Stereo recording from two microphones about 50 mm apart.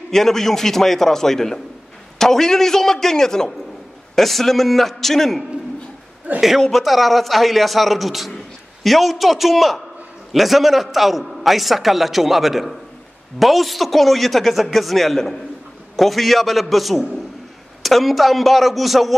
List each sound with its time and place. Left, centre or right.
0.1 s a man's voice: centre
6.3 s a man's voice: right
6.6 s a man's voice: centre